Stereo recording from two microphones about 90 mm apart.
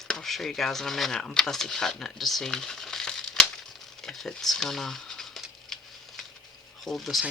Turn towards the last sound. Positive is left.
turn(degrees=0)  # may be behind; listen again after turning